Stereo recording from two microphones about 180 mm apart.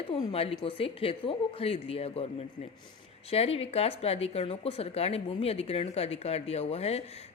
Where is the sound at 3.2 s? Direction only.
35° left (ahead or behind).